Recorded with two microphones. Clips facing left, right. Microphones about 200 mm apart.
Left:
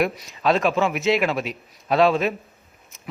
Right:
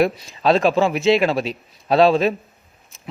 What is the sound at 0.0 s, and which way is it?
A man's voice, 30° right (ahead or behind).